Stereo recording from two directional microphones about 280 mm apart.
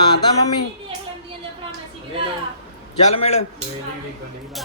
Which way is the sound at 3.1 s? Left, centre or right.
Left.